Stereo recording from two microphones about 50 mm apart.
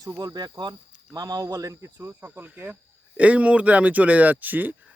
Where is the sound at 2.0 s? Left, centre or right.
Right.